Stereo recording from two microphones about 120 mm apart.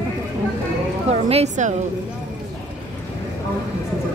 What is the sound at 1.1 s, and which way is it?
Speech, 60° right (ahead or behind).